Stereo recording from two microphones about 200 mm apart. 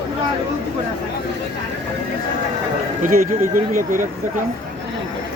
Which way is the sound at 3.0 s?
40° right (ahead or behind).